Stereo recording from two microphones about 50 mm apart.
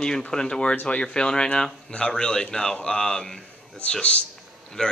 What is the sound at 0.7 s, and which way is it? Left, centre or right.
Speech, left.